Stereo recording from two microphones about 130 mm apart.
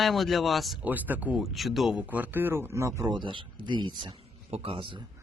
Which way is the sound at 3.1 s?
40° right (ahead or behind).